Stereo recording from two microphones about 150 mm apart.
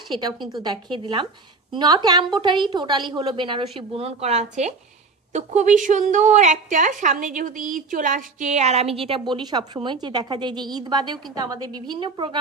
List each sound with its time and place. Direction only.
0.1 s a woman's voice: 30° right (ahead or behind)